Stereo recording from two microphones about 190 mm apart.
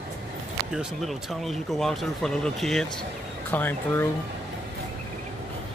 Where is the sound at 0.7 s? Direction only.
Centre (ahead or behind).